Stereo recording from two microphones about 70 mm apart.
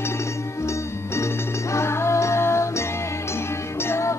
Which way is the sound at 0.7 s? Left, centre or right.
Left.